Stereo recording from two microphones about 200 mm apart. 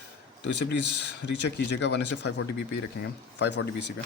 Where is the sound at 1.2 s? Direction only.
60° left (ahead or behind).